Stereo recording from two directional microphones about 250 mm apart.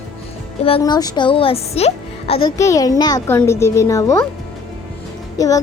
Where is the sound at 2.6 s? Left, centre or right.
Centre.